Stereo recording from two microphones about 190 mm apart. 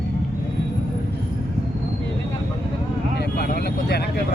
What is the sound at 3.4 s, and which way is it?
Vehicle, 55° left (ahead or behind).